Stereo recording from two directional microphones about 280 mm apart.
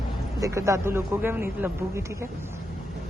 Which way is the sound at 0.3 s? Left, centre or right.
Centre.